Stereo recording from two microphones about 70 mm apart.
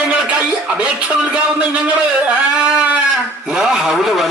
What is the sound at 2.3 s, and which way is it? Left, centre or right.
Speech, centre.